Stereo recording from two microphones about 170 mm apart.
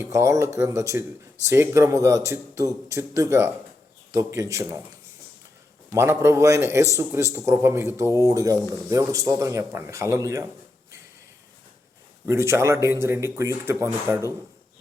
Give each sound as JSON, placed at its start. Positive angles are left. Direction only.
{"t": 0.0, "sound": "speech", "side_deg": -15}
{"t": 5.9, "sound": "speech", "side_deg": -15}
{"t": 12.3, "sound": "speech", "side_deg": -15}